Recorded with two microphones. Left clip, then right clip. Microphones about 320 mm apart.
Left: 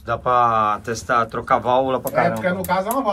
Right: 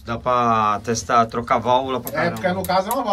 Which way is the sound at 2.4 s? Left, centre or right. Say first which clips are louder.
Right 1 dB; left.